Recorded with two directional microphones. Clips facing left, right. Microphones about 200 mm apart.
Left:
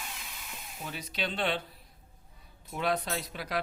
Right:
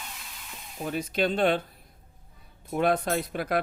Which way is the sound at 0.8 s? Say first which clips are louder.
Right 10 dB; 50° right (ahead or behind).